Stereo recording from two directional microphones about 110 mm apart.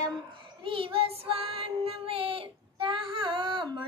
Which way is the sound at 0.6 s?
50° right (ahead or behind).